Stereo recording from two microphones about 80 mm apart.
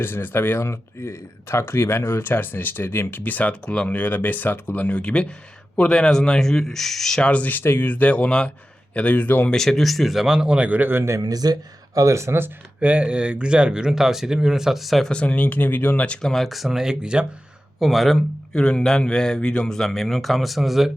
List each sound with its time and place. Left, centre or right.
0.0 s speech: left
9.5 s speech: centre; by 11.2 s right
11.2 s speech: right
11.9 s speech: right
12.8 s speech: centre
15.1 s a man's voice: centre